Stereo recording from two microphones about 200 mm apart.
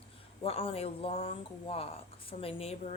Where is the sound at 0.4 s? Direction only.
30° left (ahead or behind).